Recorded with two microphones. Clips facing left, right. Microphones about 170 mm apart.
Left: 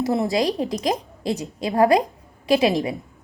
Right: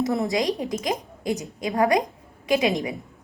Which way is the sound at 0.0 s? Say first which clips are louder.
Left 2 dB; 20° left (ahead or behind).